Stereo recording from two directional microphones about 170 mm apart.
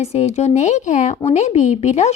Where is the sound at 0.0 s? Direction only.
40° left (ahead or behind).